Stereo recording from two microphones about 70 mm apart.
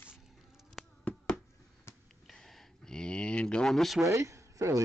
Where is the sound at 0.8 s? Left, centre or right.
Centre.